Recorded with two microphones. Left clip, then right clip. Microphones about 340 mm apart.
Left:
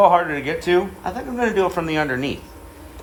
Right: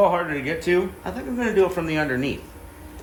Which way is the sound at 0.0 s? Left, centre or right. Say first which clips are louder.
Left 5 dB; centre.